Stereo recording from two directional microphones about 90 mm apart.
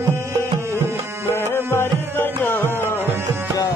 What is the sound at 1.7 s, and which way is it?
Music, 25° left (ahead or behind).